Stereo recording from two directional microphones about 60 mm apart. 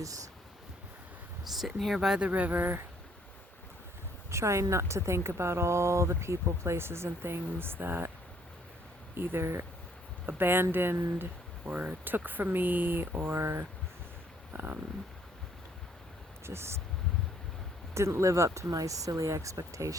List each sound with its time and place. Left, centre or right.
1.5 s speech: centre
2.2 s speech: right
4.3 s speech: right
9.1 s speech: right
10.2 s speech: right
11.2 s speech: right
14.5 s a sound: right
16.5 s speech: right
17.9 s speech: right